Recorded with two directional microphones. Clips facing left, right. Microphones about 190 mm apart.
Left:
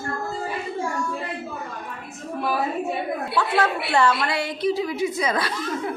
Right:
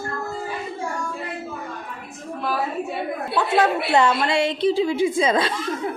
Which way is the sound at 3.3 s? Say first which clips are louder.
Right 4 dB; 20° right (ahead or behind).